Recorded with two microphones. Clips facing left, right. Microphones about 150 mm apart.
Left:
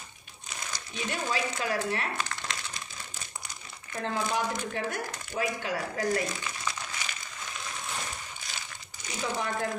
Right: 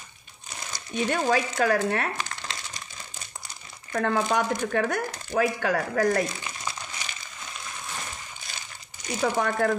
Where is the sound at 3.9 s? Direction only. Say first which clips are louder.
Right 6 dB; 70° right (ahead or behind); by 6.2 s 85° right.